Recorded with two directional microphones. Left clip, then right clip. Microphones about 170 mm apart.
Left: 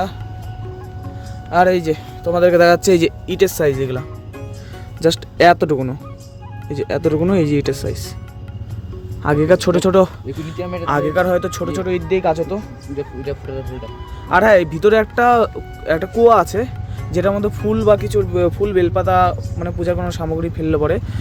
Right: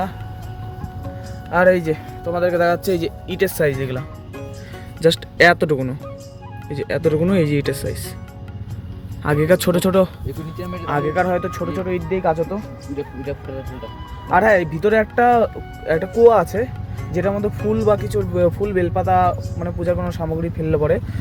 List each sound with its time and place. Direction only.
1.5 s speech: 20° left (ahead or behind)
2.3 s speech: 80° left
3.2 s speech: 25° left (ahead or behind)
5.0 s speech: 15° left (ahead or behind)
9.2 s speech: 15° left (ahead or behind)
10.3 s speech: centre (ahead or behind)
11.1 s speech: 25° left (ahead or behind)
12.5 s speech: 5° left (ahead or behind)
14.3 s speech: 15° left (ahead or behind)
15.8 s speech: 10° left (ahead or behind)
17.7 s speech: centre (ahead or behind)
18.6 s speech: 15° left (ahead or behind)